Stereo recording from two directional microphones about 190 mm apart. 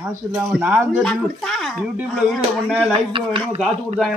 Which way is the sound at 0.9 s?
Centre (ahead or behind).